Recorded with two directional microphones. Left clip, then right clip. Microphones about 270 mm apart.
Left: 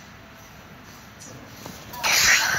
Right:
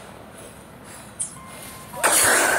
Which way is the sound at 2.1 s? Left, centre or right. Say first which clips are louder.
Left 1 dB; right.